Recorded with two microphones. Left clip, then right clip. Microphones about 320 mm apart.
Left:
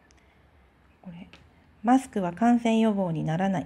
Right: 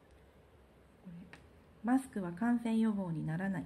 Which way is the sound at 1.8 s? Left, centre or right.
Centre.